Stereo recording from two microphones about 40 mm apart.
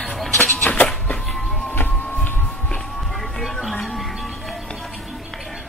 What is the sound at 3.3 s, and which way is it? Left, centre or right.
Music, centre.